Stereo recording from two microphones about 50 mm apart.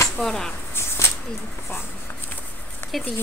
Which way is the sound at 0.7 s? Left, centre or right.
Left.